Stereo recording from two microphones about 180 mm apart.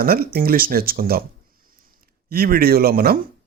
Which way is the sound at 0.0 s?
55° right (ahead or behind).